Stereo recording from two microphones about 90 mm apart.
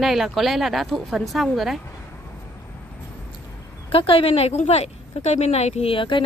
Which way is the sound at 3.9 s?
90° left.